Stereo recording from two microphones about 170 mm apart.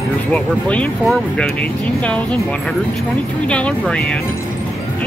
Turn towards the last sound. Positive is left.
turn(degrees=5)  # may be behind; listen again after turning